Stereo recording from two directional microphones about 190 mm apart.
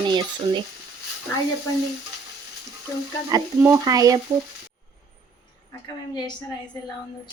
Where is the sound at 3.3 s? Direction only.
15° right (ahead or behind).